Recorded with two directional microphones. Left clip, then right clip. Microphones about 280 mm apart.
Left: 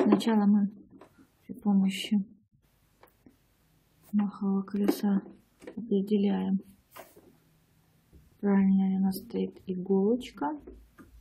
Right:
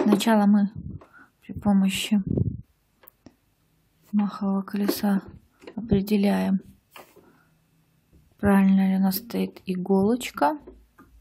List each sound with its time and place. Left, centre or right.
0.2 s speech: centre
4.3 s speech: centre
8.4 s speech: centre